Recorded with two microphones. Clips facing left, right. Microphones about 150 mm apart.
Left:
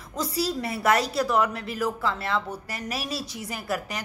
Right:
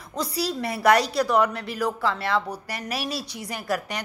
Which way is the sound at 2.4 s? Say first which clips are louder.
Right 1 dB; 35° right (ahead or behind).